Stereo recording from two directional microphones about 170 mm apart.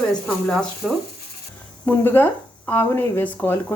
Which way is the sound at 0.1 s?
Centre (ahead or behind).